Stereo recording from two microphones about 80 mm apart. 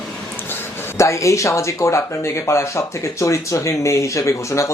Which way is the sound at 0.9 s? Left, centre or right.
Left.